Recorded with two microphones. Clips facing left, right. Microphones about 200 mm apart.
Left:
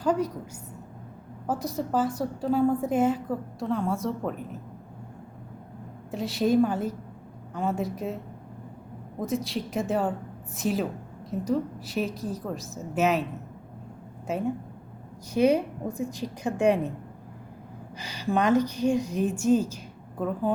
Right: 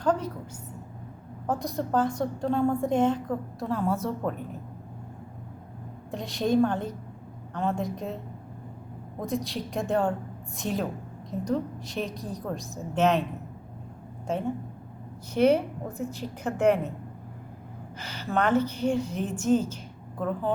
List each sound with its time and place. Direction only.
0.0 s a sound: 10° left (ahead or behind)
1.5 s a woman's voice: 5° left (ahead or behind)
6.1 s a woman's voice: 5° left (ahead or behind)
9.2 s a woman's voice: centre (ahead or behind)
15.3 s a woman's voice: 10° left (ahead or behind)
17.9 s a woman's voice: 15° left (ahead or behind)